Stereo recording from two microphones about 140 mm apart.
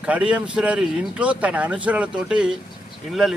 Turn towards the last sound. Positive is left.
turn(degrees=0)  # may be behind; listen again after turning